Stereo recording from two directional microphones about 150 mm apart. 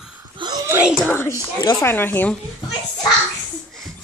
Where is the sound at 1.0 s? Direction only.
15° left (ahead or behind).